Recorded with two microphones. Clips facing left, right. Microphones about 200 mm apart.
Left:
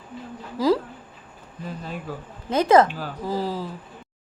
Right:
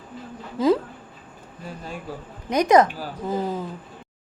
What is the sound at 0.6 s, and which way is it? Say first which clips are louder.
Speech: right 1 dB; 25° right (ahead or behind).